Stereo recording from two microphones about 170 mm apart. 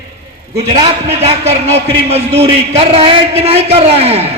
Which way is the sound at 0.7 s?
30° right (ahead or behind).